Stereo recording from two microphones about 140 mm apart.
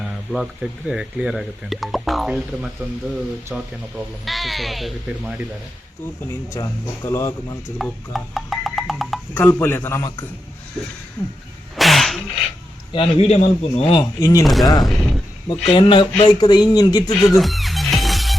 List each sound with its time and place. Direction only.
0.3 s speech: 5° right (ahead or behind)
6.2 s speech: 20° left (ahead or behind)
7.8 s music: centre (ahead or behind)
9.3 s a man's voice: 15° left (ahead or behind)
11.8 s sneeze: centre (ahead or behind)
12.9 s a man's voice: 40° left (ahead or behind)
14.0 s speech: 25° left (ahead or behind)
14.4 s speech: centre (ahead or behind)
14.8 s a sound: centre (ahead or behind)
15.7 s speech: 35° left (ahead or behind)
17.2 s music: centre (ahead or behind)